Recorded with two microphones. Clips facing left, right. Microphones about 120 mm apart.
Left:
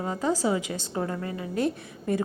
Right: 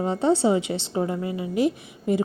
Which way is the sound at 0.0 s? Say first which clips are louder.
Right 6 dB; 30° right (ahead or behind).